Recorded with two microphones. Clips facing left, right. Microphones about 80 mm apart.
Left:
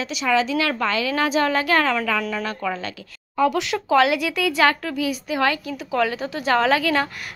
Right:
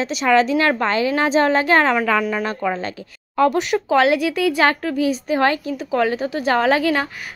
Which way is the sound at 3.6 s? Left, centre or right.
Right.